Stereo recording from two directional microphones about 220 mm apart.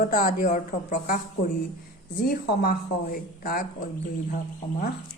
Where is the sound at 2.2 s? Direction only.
40° left (ahead or behind).